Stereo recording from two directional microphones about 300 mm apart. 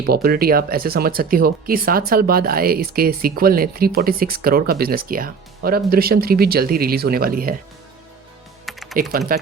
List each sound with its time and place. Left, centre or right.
0.0 s speech: right
8.6 s typing: centre
9.0 s speech: right